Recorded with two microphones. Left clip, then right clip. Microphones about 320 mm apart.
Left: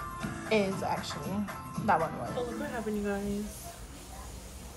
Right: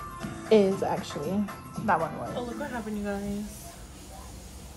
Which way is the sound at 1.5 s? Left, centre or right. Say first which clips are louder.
Even; centre.